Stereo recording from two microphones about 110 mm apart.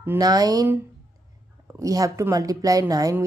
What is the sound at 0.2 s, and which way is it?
Speech, 35° right (ahead or behind).